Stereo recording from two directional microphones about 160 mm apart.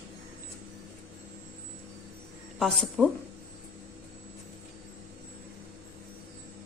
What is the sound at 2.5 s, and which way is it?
Speech, centre (ahead or behind).